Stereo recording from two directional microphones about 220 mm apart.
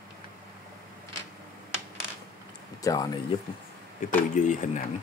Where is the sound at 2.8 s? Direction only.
15° left (ahead or behind).